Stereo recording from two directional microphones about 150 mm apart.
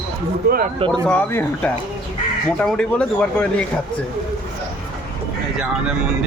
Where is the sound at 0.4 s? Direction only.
90° right.